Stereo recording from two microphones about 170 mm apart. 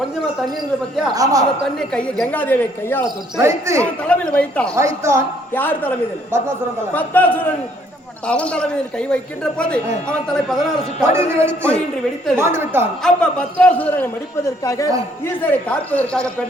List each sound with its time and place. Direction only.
1.1 s a man's voice: 20° right (ahead or behind)
1.6 s a man's voice: 5° left (ahead or behind)
3.4 s music: 15° right (ahead or behind)
4.0 s a man's voice: 5° left (ahead or behind)
4.7 s music: 15° right (ahead or behind)
5.5 s a man's voice: 10° left (ahead or behind)
6.9 s a man's voice: 10° left (ahead or behind)
11.1 s music: 15° right (ahead or behind)
13.0 s a man's voice: 5° left (ahead or behind)
15.3 s a man's voice: 10° left (ahead or behind)